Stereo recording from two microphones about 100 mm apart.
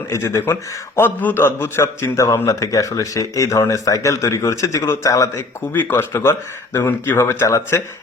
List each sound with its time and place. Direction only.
0.1 s a man's voice: 30° left (ahead or behind)
5.7 s speech: 20° left (ahead or behind)